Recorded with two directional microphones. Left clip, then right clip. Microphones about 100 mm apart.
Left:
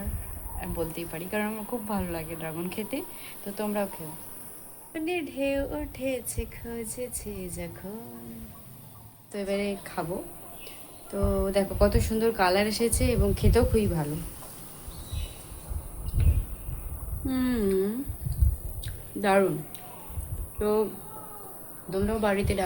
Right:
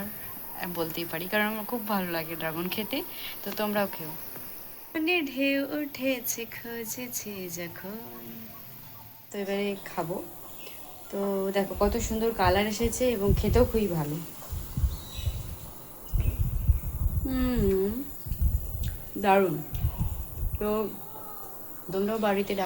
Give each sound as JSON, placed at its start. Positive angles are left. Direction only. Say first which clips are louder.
{"t": 0.6, "sound": "speech", "louder": "right 1 dB", "side_deg": -5}
{"t": 9.3, "sound": "a woman's voice", "louder": "left 1 dB", "side_deg": 10}
{"t": 11.1, "sound": "a woman's voice", "louder": "left 2 dB", "side_deg": 10}
{"t": 13.3, "sound": "a woman's voice", "louder": "even", "side_deg": 5}
{"t": 17.2, "sound": "a woman's voice", "louder": "even", "side_deg": 15}
{"t": 18.8, "sound": "a sound", "louder": "left 1 dB", "side_deg": 10}
{"t": 20.6, "sound": "speech", "louder": "left 3 dB", "side_deg": 10}
{"t": 21.8, "sound": "speech", "louder": "even", "side_deg": 5}